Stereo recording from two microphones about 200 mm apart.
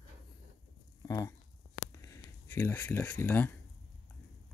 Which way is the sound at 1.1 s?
15° left (ahead or behind).